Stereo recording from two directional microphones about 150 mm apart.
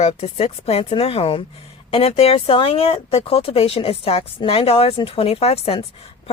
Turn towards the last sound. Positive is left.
turn(degrees=40)  # may be behind; listen again after turning